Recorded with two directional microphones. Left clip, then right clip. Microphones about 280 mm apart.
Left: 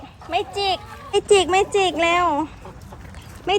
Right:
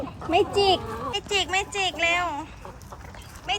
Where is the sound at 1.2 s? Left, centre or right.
Centre.